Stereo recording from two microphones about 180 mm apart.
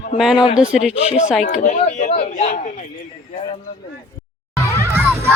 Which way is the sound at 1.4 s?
45° left (ahead or behind).